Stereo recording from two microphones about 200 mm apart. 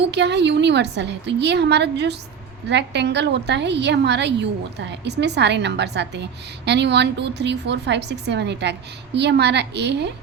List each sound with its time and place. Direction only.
0.1 s a woman's voice: 60° right (ahead or behind)